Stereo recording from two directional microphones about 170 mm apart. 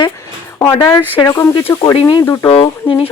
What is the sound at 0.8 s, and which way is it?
A woman's voice, 15° left (ahead or behind).